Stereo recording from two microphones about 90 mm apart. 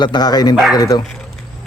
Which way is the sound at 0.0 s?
50° left (ahead or behind).